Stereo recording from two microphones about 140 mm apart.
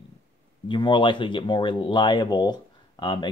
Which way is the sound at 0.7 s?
35° left (ahead or behind).